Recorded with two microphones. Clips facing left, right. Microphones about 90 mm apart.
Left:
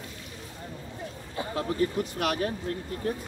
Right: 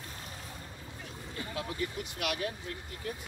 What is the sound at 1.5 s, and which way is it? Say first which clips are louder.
Speech: left 10 dB; 40° left (ahead or behind).